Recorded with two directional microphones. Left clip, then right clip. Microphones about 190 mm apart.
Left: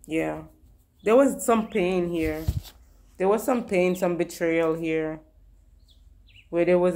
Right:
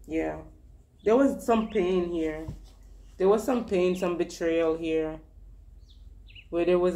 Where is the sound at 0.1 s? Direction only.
45° left (ahead or behind).